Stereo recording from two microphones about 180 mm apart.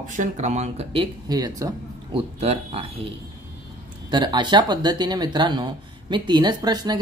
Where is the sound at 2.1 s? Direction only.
35° right (ahead or behind).